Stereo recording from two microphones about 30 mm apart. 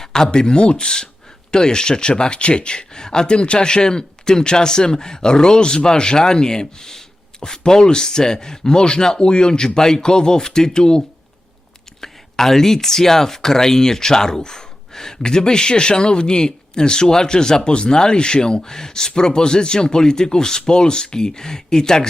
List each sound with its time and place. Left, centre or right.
0.0 s speech: left
14.4 s gasp: centre
15.2 s speech: left